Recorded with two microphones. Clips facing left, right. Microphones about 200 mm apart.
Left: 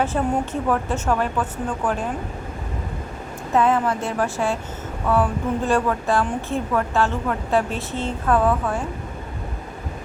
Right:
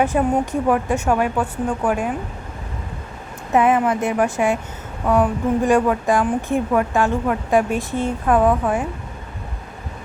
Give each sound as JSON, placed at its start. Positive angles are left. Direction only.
{"t": 0.0, "sound": "a woman's voice", "side_deg": -15}
{"t": 3.5, "sound": "a woman's voice", "side_deg": -15}